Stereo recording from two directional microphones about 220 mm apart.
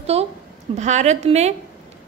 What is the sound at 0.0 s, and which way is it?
A woman's voice, 30° right (ahead or behind).